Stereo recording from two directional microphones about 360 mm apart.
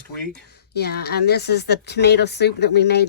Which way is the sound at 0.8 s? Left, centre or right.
Left.